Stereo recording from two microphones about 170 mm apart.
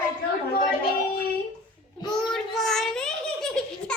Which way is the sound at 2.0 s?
25° left (ahead or behind).